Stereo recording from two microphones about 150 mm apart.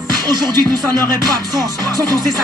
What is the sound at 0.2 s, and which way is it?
Music, 25° right (ahead or behind).